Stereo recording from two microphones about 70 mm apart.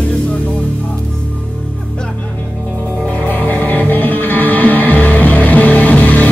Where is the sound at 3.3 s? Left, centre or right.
Left.